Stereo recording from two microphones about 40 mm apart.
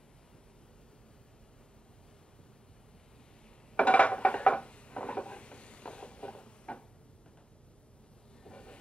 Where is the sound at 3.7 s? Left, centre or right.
Left.